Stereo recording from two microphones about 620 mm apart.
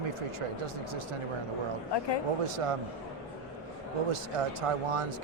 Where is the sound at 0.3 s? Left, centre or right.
Right.